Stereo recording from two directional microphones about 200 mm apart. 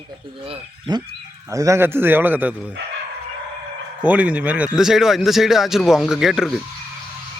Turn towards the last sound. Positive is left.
turn(degrees=0)  # may be behind; listen again after turning